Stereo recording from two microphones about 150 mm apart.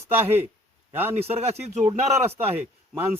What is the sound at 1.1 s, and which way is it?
Speech, 45° right (ahead or behind).